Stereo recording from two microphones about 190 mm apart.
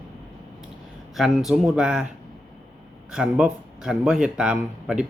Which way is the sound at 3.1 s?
5° right (ahead or behind).